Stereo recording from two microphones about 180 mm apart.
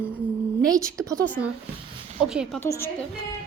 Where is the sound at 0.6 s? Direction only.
20° right (ahead or behind).